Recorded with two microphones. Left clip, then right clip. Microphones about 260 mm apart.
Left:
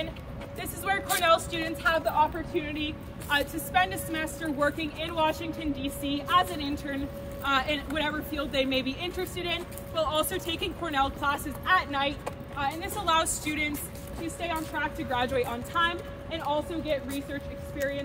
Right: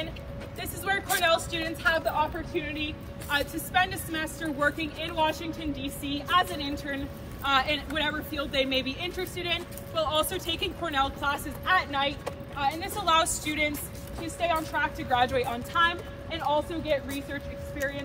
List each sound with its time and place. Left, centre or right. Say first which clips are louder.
0.6 s speech: even; left; by 13.7 s centre
14.2 s speech: right 4 dB; centre